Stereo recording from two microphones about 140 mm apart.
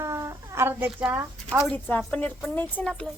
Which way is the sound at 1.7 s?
10° left (ahead or behind).